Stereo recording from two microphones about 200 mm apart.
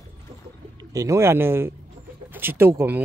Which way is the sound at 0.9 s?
15° right (ahead or behind).